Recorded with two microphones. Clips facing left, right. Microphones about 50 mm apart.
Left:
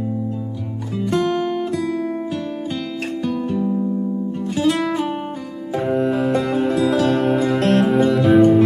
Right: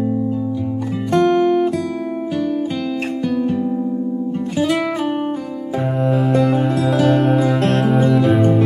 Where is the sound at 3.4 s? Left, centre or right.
Centre.